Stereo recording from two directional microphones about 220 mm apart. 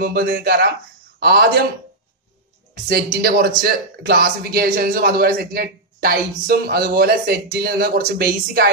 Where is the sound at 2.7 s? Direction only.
45° right (ahead or behind).